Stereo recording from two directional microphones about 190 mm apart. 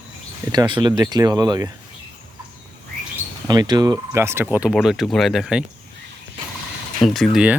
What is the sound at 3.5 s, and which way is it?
Speech, 20° right (ahead or behind).